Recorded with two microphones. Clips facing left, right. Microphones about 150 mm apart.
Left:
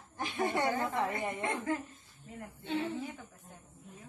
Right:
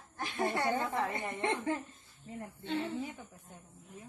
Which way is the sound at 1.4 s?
25° right (ahead or behind).